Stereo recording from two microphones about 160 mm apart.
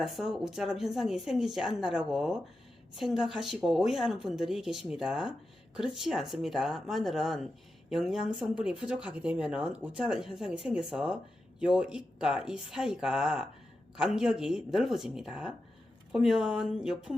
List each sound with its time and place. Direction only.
0.0 s speech: 5° right (ahead or behind)